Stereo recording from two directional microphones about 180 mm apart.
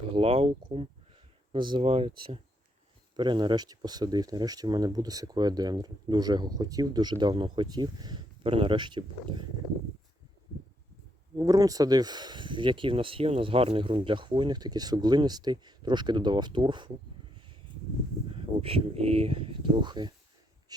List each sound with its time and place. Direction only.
0.1 s speech: 35° right (ahead or behind)
11.3 s speech: 20° right (ahead or behind)
18.6 s speech: 35° right (ahead or behind)